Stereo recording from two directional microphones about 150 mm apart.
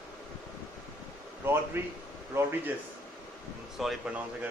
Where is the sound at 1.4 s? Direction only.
15° right (ahead or behind).